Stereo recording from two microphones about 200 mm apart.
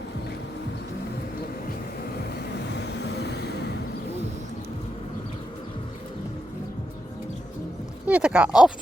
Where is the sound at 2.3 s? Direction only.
60° left (ahead or behind).